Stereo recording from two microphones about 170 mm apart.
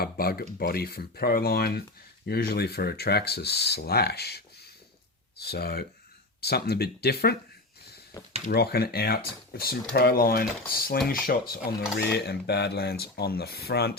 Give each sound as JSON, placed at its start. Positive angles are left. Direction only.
{"t": 0.0, "sound": "speech", "side_deg": 65}
{"t": 8.1, "sound": "speech", "side_deg": 20}
{"t": 8.4, "sound": "speech", "side_deg": 65}